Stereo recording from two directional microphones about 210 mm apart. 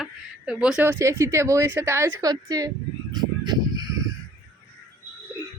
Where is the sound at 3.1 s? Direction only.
20° right (ahead or behind).